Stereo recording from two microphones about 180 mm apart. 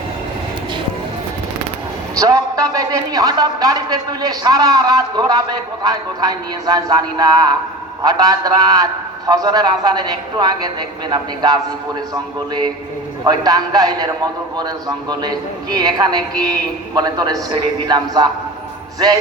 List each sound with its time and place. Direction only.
2.1 s a man's voice: 20° right (ahead or behind)